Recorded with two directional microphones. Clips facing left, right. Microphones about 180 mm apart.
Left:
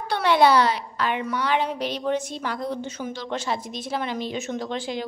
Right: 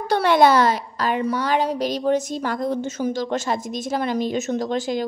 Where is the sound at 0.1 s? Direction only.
45° right (ahead or behind).